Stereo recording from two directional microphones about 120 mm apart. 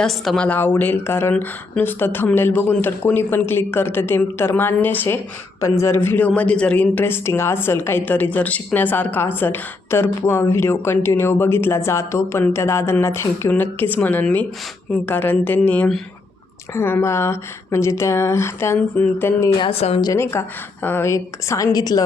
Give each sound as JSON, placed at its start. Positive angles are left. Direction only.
{"t": 0.0, "sound": "a woman's voice", "side_deg": 0}
{"t": 0.4, "sound": "speech", "side_deg": 15}
{"t": 19.5, "sound": "a woman's voice", "side_deg": 45}
{"t": 20.3, "sound": "speech", "side_deg": 25}